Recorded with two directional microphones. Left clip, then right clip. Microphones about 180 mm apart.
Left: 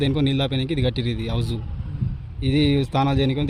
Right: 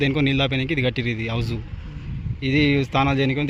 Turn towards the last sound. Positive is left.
turn(degrees=5)  # may be behind; listen again after turning